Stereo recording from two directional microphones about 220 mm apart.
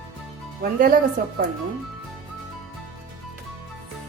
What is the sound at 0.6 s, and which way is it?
Speech, 40° right (ahead or behind).